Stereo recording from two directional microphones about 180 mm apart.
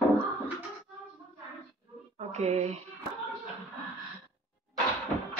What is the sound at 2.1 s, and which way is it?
Music, 40° right (ahead or behind).